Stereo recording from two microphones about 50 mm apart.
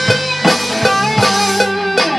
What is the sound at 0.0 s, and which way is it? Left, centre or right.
Music, centre.